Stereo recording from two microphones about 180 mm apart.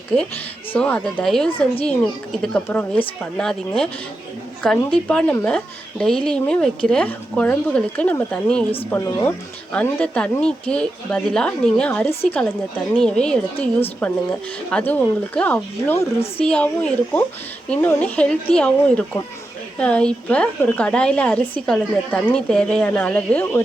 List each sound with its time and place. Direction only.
0.7 s a woman's voice: 5° left (ahead or behind)